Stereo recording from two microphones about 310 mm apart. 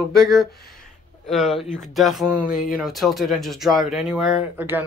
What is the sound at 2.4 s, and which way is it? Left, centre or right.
Speech, left.